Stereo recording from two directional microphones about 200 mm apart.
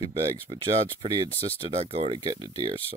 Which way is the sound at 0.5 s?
30° right (ahead or behind).